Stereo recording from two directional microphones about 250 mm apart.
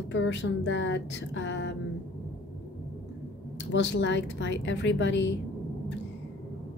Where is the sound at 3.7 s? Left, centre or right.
Left.